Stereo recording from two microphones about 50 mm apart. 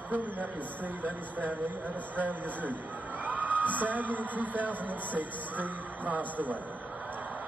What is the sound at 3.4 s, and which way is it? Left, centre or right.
A man's voice, right.